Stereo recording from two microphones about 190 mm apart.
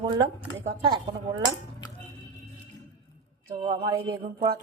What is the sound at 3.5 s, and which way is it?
Speech, 25° right (ahead or behind).